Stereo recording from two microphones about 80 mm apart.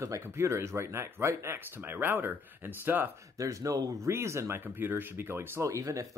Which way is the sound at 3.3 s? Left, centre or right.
Right.